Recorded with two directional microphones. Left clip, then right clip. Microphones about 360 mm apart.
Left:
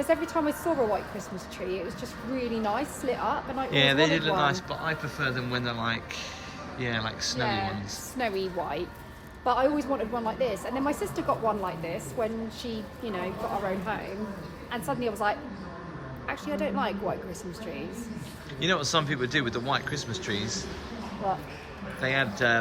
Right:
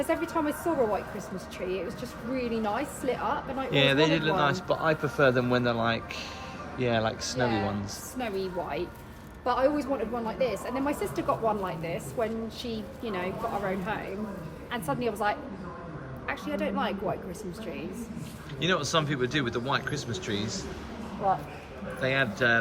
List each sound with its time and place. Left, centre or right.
0.0 s speech: centre
2.3 s speech: centre
8.2 s speech: left
9.4 s speech: centre
18.6 s speech: centre
22.0 s speech: centre